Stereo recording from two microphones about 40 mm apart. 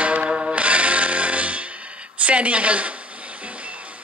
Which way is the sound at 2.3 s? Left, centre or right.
Right.